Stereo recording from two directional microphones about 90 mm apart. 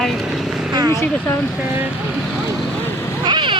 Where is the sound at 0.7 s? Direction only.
45° right (ahead or behind).